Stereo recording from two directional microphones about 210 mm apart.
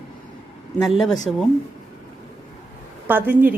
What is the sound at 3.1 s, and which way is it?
Speech, 10° right (ahead or behind).